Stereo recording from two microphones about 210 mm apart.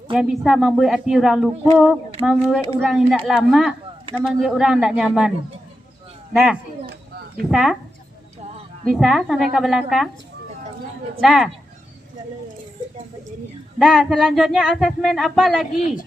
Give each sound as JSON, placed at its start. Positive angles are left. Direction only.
{"t": 0.1, "sound": "speech", "side_deg": -5}
{"t": 6.3, "sound": "speech", "side_deg": 0}
{"t": 6.8, "sound": "a sound", "side_deg": -45}
{"t": 7.5, "sound": "speech", "side_deg": 0}
{"t": 8.8, "sound": "speech", "side_deg": 0}
{"t": 11.2, "sound": "speech", "side_deg": 0}
{"t": 13.7, "sound": "speech", "side_deg": 0}